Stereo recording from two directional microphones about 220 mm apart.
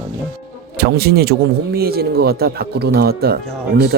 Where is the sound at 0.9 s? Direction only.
45° right (ahead or behind).